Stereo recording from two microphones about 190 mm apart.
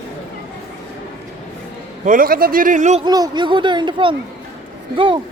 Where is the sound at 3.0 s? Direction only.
20° right (ahead or behind).